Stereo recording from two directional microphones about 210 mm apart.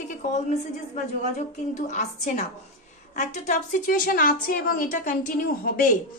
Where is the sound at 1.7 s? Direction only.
35° left (ahead or behind).